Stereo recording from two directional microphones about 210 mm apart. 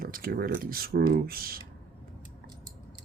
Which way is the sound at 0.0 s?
45° right (ahead or behind).